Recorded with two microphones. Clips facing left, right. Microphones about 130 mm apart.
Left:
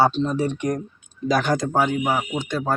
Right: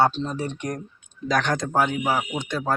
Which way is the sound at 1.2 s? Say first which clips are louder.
Left 3 dB; 5° left (ahead or behind).